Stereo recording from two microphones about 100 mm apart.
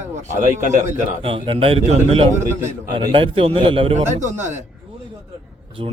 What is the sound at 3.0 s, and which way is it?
Speech, 45° right (ahead or behind).